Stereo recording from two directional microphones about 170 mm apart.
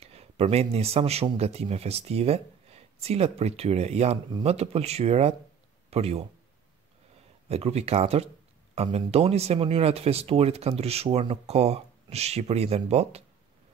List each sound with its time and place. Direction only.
0.0 s speech: 35° right (ahead or behind)
7.4 s speech: 40° right (ahead or behind)